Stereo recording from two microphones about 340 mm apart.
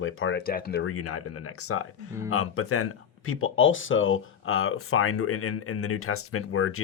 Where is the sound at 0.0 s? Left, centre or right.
Left.